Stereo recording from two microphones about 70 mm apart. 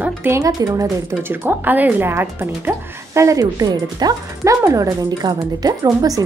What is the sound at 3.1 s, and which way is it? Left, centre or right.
Speech, right.